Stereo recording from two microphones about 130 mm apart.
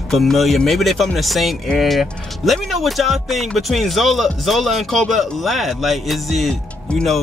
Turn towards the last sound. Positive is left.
turn(degrees=10)  # may be behind; listen again after turning